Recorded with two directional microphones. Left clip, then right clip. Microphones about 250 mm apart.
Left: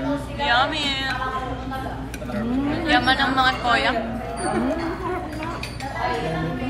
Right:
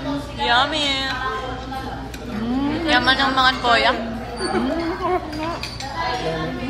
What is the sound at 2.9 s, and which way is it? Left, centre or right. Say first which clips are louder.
A woman's voice: right 2 dB; centre.